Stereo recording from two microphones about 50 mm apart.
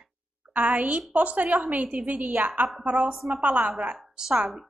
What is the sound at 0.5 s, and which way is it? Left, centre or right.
A woman's voice, right.